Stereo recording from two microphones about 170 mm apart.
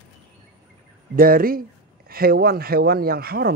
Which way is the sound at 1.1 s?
55° right (ahead or behind).